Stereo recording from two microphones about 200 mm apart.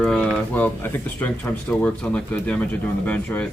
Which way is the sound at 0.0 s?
Centre (ahead or behind).